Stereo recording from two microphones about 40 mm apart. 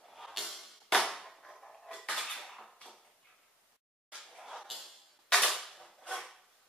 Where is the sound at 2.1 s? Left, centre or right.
Centre.